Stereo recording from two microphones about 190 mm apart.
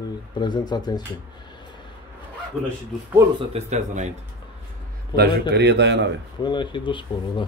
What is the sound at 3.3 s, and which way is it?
Speech, 35° right (ahead or behind).